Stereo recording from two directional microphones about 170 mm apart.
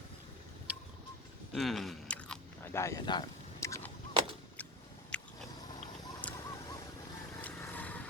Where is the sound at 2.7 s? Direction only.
20° left (ahead or behind).